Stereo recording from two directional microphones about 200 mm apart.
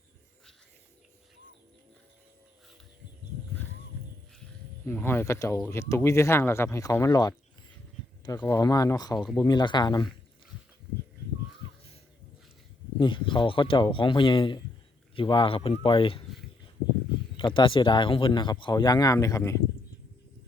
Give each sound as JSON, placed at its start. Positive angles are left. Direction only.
{"t": 4.9, "sound": "speech", "side_deg": 10}
{"t": 9.1, "sound": "speech", "side_deg": 0}
{"t": 9.4, "sound": "speech", "side_deg": 20}
{"t": 13.0, "sound": "speech", "side_deg": 25}
{"t": 17.3, "sound": "speech", "side_deg": 25}